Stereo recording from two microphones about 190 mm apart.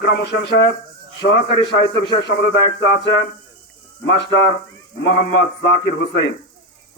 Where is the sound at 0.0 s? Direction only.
65° left (ahead or behind).